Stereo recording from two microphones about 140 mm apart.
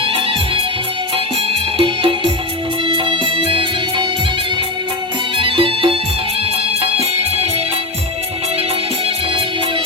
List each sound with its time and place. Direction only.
0.0 s music: 40° right (ahead or behind)
1.8 s music: 40° right (ahead or behind)
5.4 s music: 40° right (ahead or behind)